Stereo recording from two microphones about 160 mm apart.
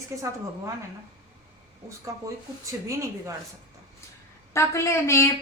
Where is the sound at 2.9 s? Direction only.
20° right (ahead or behind).